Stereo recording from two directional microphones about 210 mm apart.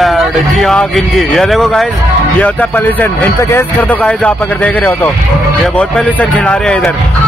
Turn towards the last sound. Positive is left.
turn(degrees=5)  # may be behind; listen again after turning